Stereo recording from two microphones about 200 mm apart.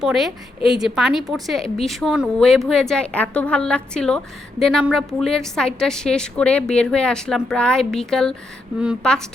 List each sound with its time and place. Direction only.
0.0 s a woman's voice: centre (ahead or behind)